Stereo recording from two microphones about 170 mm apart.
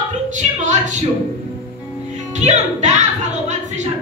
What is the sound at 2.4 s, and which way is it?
Speech, 45° right (ahead or behind).